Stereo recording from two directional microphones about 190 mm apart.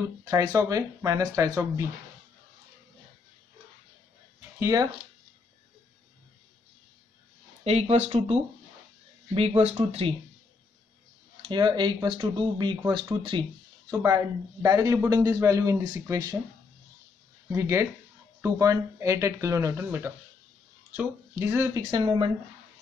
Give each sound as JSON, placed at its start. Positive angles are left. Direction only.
{"t": 0.2, "sound": "speech", "side_deg": -20}
{"t": 4.6, "sound": "speech", "side_deg": -15}
{"t": 7.6, "sound": "speech", "side_deg": -30}
{"t": 11.4, "sound": "speech", "side_deg": -25}
{"t": 17.5, "sound": "speech", "side_deg": -15}